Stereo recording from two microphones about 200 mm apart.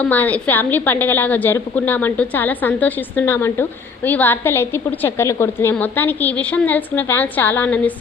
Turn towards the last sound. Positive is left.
turn(degrees=10)  # may be behind; listen again after turning